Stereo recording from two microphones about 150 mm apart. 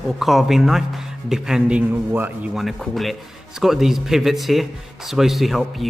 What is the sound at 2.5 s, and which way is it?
A man's voice, centre (ahead or behind).